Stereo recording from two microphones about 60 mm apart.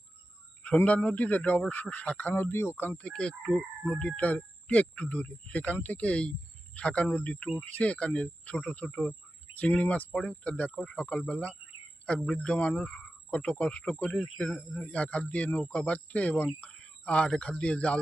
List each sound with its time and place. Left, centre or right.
0.9 s speech: left
2.3 s speech: left
3.0 s speech: centre